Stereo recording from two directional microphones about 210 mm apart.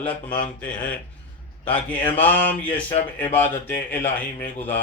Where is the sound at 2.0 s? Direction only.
10° left (ahead or behind).